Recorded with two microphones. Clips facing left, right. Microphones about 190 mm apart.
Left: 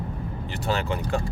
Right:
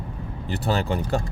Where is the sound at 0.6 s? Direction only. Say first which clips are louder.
Right 2 dB; 35° right (ahead or behind).